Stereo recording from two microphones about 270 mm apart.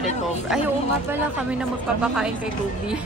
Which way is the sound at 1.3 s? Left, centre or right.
Centre.